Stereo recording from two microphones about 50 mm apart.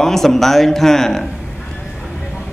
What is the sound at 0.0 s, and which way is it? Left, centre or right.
A man's voice, centre.